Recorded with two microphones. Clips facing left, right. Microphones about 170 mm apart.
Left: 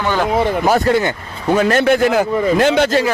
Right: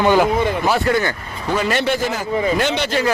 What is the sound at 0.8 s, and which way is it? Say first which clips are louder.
Speech: left 3 dB; 25° left (ahead or behind).